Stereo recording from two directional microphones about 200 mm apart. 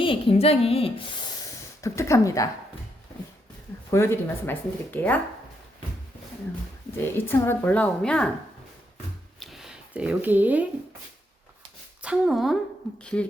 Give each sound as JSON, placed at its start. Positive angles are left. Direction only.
{"t": 0.0, "sound": "speech", "side_deg": 25}
{"t": 3.9, "sound": "a woman's voice", "side_deg": 15}
{"t": 6.9, "sound": "a woman's voice", "side_deg": 10}
{"t": 9.4, "sound": "a sound", "side_deg": 0}
{"t": 12.0, "sound": "speech", "side_deg": -5}